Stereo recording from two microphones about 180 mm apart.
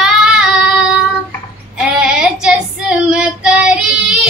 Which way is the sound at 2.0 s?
5° right (ahead or behind).